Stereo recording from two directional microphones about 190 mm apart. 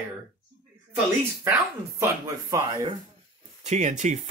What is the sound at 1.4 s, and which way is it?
Speech, 15° right (ahead or behind).